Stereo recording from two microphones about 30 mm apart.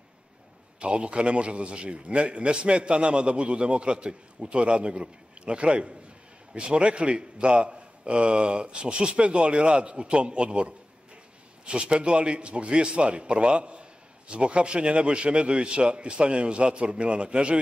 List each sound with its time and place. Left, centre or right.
0.7 s a man's voice: right